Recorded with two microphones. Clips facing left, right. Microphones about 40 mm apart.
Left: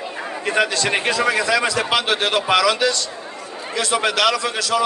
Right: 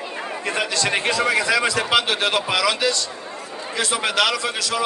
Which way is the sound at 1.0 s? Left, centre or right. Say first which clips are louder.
Left 1 dB; centre.